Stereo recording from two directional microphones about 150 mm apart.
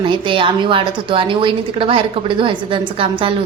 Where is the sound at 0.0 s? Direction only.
35° right (ahead or behind).